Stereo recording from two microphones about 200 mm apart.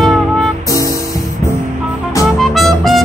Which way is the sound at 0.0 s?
Centre (ahead or behind).